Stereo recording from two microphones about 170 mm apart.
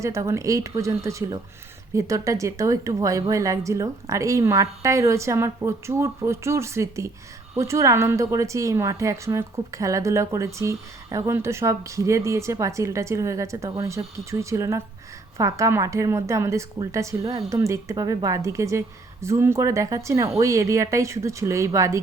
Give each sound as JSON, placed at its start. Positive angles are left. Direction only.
{"t": 0.0, "sound": "a woman's voice", "side_deg": -15}